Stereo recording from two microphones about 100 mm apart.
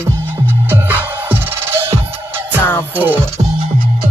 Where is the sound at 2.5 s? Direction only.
20° left (ahead or behind).